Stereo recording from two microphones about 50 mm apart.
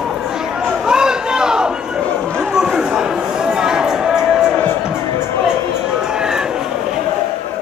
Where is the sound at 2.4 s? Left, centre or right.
Centre.